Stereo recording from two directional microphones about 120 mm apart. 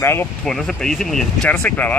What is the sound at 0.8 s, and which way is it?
Speech, 5° left (ahead or behind).